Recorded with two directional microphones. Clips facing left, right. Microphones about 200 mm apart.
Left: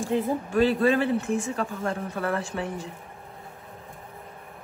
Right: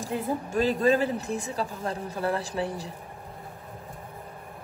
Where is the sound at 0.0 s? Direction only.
40° right (ahead or behind).